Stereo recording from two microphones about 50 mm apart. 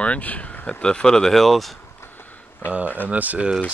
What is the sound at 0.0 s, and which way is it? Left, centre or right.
Speech, left.